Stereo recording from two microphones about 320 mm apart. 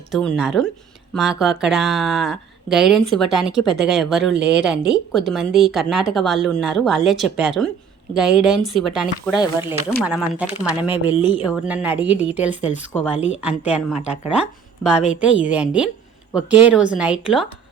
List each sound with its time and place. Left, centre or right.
0.1 s speech: centre